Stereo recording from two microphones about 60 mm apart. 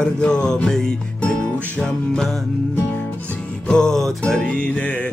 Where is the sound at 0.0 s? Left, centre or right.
Centre.